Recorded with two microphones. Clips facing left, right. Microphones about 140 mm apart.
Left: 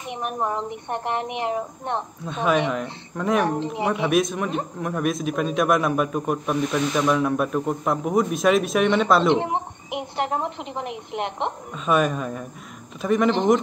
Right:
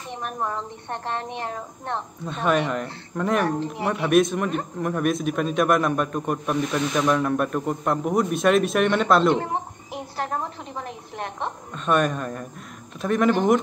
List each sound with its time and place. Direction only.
0.1 s speech: 15° left (ahead or behind)
2.2 s a man's voice: centre (ahead or behind)
3.4 s a woman's voice: 20° left (ahead or behind)
4.1 s a man's voice: centre (ahead or behind)
9.3 s a woman's voice: 20° left (ahead or behind)
11.7 s a man's voice: centre (ahead or behind)